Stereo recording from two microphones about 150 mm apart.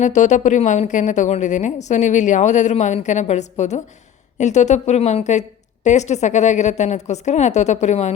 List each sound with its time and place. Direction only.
0.0 s a woman's voice: 55° left (ahead or behind)